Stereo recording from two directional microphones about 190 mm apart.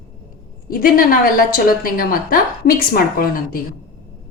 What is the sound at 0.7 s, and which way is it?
A woman's voice, 50° left (ahead or behind).